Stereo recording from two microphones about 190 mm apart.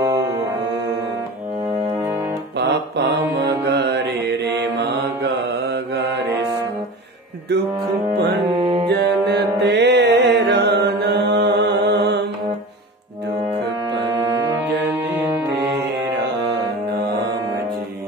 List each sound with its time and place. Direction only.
0.0 s music: 15° right (ahead or behind)
2.6 s mantra: 70° right (ahead or behind)
3.6 s music: 65° right (ahead or behind)
8.5 s music: 25° right (ahead or behind)
8.8 s music: 60° right (ahead or behind)